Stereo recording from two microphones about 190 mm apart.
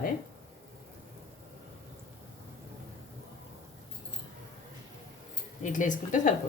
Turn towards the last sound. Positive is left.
turn(degrees=40)  # may be behind; listen again after turning